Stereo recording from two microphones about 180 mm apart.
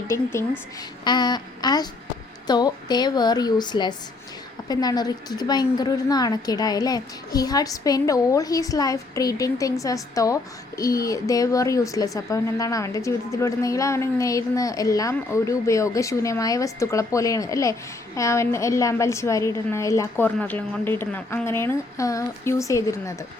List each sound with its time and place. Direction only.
0.1 s a woman's voice: 15° left (ahead or behind)